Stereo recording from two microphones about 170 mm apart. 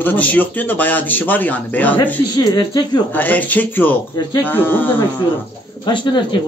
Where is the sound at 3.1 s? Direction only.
10° left (ahead or behind).